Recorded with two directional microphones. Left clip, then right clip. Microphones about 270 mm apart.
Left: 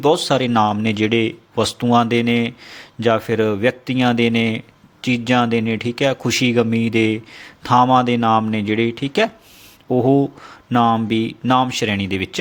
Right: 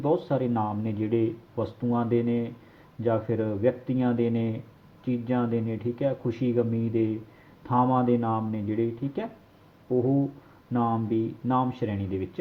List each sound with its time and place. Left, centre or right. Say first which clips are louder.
0.0 s speech: left 10 dB; left
10.7 s speech: left 11 dB; left